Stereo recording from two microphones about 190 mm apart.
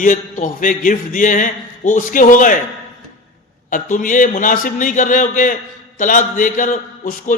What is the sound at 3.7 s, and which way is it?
A man's voice, 45° left (ahead or behind).